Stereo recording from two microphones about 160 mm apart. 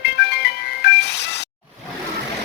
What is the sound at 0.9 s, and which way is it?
Music, 90° left.